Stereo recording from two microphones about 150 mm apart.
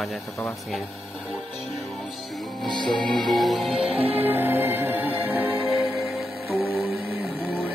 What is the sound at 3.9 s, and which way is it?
Music, 40° right (ahead or behind).